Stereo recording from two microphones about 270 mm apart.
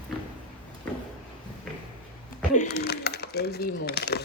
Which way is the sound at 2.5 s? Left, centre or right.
Left.